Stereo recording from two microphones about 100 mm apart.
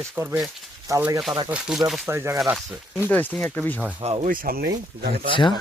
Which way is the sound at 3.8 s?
15° right (ahead or behind).